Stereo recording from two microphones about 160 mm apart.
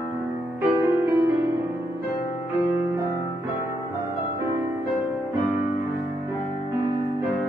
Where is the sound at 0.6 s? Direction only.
10° right (ahead or behind).